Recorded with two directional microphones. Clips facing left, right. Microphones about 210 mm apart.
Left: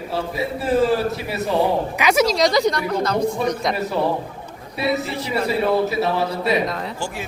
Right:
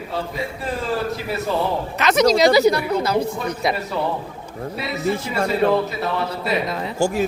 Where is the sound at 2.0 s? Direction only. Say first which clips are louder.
Right 3 dB; 10° left (ahead or behind).